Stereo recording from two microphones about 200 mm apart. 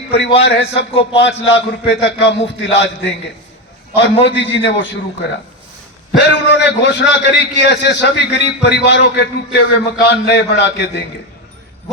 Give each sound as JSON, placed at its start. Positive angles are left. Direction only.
{"t": 0.4, "sound": "a man's voice", "side_deg": 60}